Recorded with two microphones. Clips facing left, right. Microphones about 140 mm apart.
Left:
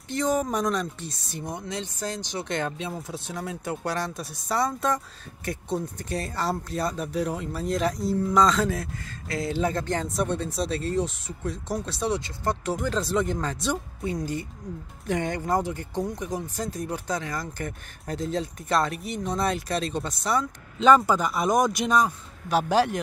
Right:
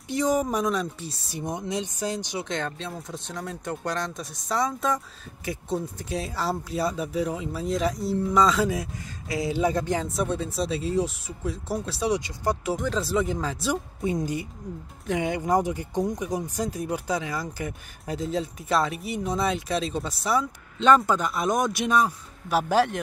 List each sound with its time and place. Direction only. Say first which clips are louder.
0.1 s speech: right 1 dB; 10° right (ahead or behind)
1.4 s speech: right 4 dB; 20° right (ahead or behind)
2.4 s speech: left 2 dB; 5° left (ahead or behind); by 12.7 s 10° right (ahead or behind)
12.7 s speech: even; centre (ahead or behind)
14.0 s speech: right 2 dB; 15° right (ahead or behind); by 22.9 s centre (ahead or behind)